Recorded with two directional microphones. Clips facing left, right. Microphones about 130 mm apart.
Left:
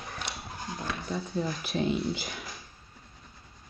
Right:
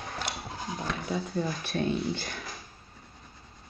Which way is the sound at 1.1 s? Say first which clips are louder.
Right 1 dB; centre (ahead or behind).